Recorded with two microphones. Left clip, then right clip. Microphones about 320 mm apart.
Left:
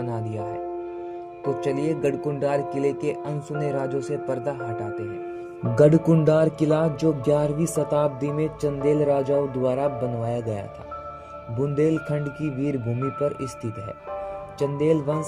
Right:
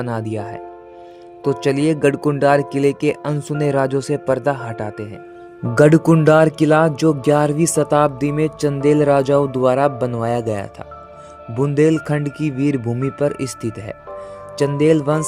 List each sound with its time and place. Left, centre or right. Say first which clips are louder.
0.0 s speech: right 6 dB; right